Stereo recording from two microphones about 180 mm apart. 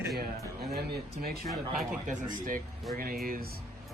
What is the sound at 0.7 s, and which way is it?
Speech, 60° right (ahead or behind).